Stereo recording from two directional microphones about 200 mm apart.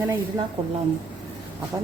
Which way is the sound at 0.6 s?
30° right (ahead or behind).